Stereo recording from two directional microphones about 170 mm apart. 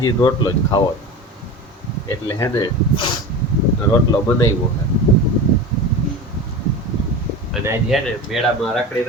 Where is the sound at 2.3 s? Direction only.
25° left (ahead or behind).